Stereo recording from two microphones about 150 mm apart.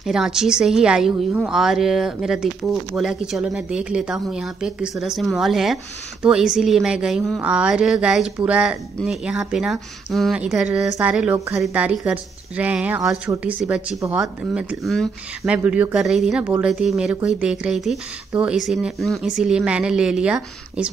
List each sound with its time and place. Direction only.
0.0 s a woman's voice: 5° right (ahead or behind)
11.3 s a woman's voice: 20° right (ahead or behind)
11.6 s speech: 10° right (ahead or behind)
14.0 s a woman's voice: 20° right (ahead or behind)
14.5 s a woman's voice: 5° right (ahead or behind)